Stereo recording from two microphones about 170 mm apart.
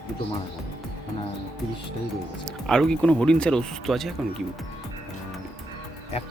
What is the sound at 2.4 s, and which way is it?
Speech, 5° left (ahead or behind).